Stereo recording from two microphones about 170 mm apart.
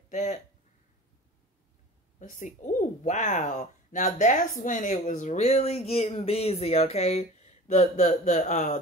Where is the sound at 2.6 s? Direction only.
50° left (ahead or behind).